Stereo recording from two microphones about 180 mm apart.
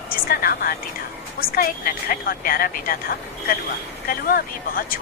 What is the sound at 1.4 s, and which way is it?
Speech, 50° left (ahead or behind).